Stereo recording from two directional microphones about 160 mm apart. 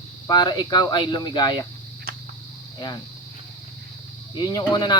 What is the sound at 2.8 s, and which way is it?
Speech, 25° left (ahead or behind).